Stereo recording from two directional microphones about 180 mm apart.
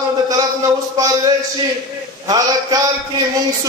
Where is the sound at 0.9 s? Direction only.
20° right (ahead or behind).